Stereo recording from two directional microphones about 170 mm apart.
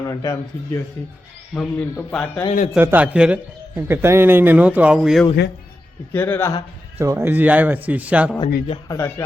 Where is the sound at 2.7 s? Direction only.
10° right (ahead or behind).